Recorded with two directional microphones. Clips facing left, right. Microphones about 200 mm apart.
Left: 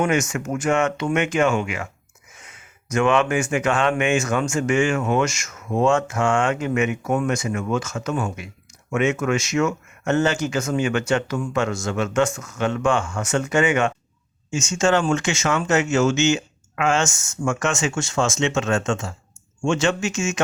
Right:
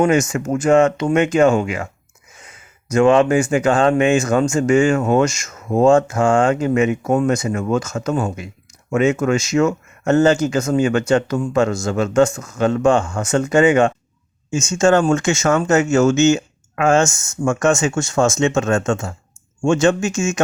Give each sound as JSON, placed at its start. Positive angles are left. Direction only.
{"t": 0.0, "sound": "speech", "side_deg": -35}